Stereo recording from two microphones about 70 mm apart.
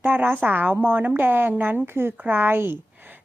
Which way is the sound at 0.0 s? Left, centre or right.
Right.